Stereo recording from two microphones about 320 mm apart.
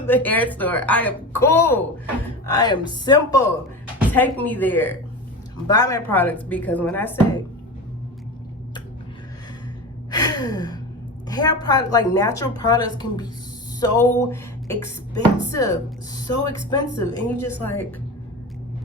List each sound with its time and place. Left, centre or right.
0.1 s a woman's voice: centre
10.1 s gasp: centre
11.3 s a woman's voice: centre
13.7 s music: centre
15.4 s a woman's voice: centre